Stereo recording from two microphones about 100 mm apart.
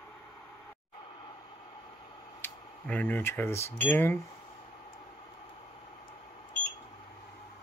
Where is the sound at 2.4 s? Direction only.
15° left (ahead or behind).